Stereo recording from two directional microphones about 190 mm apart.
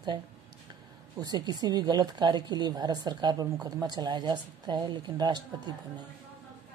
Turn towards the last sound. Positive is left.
turn(degrees=-20)  # may be behind; listen again after turning